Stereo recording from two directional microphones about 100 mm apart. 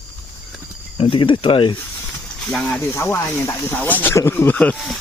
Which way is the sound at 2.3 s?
5° left (ahead or behind).